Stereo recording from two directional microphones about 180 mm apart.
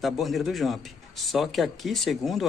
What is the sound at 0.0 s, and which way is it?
A man's voice, centre (ahead or behind).